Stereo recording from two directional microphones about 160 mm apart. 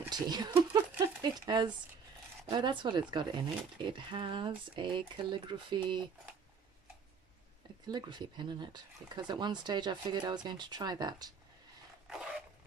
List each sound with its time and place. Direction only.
0.1 s a sound: 25° right (ahead or behind)
1.4 s speech: 25° right (ahead or behind)
7.8 s speech: 25° right (ahead or behind)